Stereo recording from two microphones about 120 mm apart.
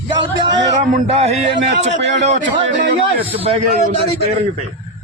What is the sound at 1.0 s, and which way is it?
A man's voice, 60° right (ahead or behind).